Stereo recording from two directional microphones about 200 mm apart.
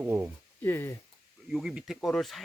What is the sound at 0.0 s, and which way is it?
Speech, 10° right (ahead or behind).